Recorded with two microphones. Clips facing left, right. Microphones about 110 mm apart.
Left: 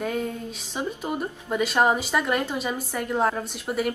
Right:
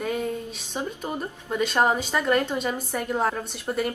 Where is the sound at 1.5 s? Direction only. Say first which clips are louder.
Left 1 dB; 5° left (ahead or behind).